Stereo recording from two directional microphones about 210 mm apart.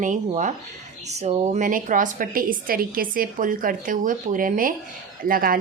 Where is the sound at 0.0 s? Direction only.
35° right (ahead or behind).